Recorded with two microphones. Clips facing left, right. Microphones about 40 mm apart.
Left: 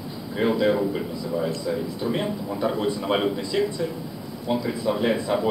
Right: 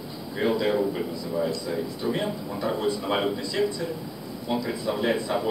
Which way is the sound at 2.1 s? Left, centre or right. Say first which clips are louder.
Left 2 dB; left.